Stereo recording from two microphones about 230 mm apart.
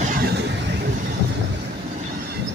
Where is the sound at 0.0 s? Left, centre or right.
Right.